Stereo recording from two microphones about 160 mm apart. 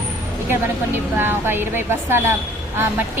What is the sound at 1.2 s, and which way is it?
A woman's voice, 15° right (ahead or behind).